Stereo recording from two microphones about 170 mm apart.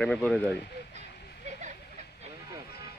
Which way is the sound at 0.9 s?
45° right (ahead or behind).